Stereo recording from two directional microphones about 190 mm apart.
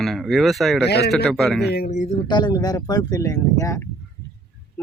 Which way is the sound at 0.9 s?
60° left (ahead or behind).